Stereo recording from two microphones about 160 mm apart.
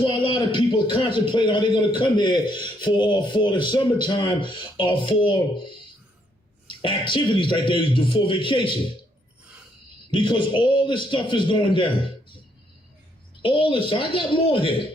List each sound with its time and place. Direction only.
0.0 s a man's voice: 35° left (ahead or behind)
10.1 s a man's voice: 30° left (ahead or behind)
13.4 s a man's voice: 30° left (ahead or behind)